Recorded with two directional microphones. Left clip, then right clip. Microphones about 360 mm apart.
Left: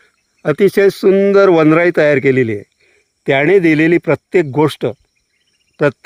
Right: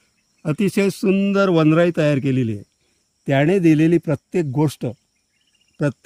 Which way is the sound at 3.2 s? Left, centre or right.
Centre.